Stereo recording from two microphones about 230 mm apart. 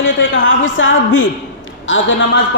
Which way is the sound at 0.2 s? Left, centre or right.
Left.